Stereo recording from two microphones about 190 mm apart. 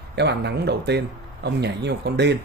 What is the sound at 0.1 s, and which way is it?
A man's voice, 60° right (ahead or behind).